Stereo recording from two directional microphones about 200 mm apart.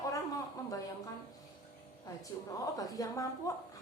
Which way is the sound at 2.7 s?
15° left (ahead or behind).